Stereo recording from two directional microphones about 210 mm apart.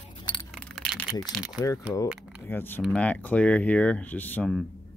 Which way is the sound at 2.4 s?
10° left (ahead or behind).